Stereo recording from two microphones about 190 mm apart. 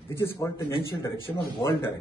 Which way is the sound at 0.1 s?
15° left (ahead or behind).